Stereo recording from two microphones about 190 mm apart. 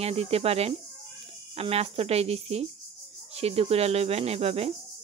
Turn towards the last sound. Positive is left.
turn(degrees=-30)  # may be behind; listen again after turning